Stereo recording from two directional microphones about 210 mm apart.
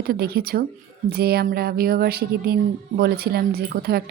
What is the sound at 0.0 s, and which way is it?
A woman's voice, 45° right (ahead or behind).